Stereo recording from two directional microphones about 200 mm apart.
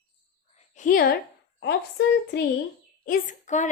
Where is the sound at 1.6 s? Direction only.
60° left (ahead or behind).